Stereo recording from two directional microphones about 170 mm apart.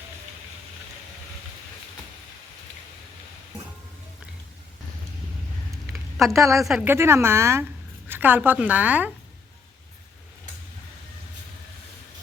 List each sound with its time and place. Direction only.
5.9 s a sound: centre (ahead or behind)
6.3 s a woman's voice: 20° right (ahead or behind)
6.6 s a woman's voice: centre (ahead or behind)
6.8 s a woman's voice: 15° right (ahead or behind)